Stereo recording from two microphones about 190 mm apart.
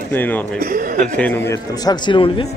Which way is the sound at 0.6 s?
45° right (ahead or behind).